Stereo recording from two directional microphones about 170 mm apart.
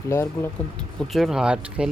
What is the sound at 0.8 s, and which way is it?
Speech, centre (ahead or behind).